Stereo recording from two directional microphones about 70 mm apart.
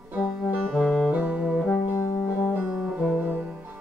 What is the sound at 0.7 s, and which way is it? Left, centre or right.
Music, centre.